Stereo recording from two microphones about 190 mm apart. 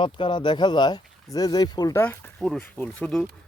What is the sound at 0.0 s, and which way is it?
Speech, 25° left (ahead or behind).